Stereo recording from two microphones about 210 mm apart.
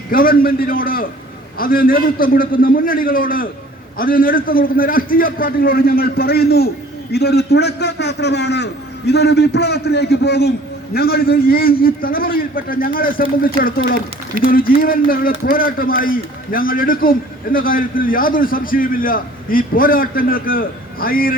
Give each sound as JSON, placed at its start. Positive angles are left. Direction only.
{"t": 0.1, "sound": "a man's voice", "side_deg": 45}